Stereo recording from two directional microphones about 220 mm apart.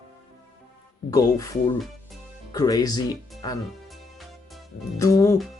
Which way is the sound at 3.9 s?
Centre (ahead or behind).